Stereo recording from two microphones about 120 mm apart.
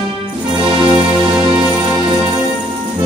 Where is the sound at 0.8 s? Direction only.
45° right (ahead or behind).